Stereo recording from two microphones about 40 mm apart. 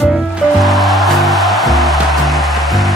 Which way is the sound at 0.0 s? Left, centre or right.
Centre.